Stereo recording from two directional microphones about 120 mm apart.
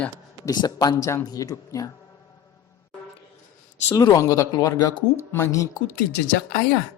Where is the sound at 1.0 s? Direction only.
25° left (ahead or behind).